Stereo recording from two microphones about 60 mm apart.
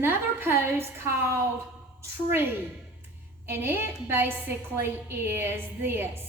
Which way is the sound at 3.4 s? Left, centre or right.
Right.